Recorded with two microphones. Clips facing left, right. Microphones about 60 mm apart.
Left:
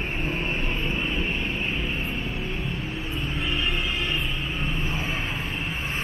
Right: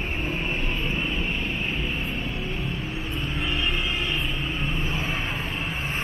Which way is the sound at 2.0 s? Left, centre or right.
Centre.